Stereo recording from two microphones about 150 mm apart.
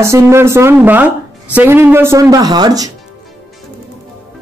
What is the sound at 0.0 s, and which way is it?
Speech, 20° right (ahead or behind).